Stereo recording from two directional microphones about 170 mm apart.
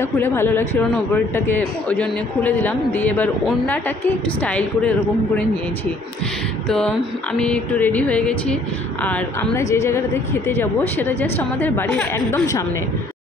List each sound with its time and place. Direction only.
0.0 s a woman's voice: 15° left (ahead or behind)
7.3 s a woman's voice: 5° left (ahead or behind)